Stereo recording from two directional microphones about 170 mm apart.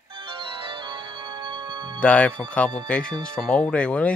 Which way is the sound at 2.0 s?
10° left (ahead or behind).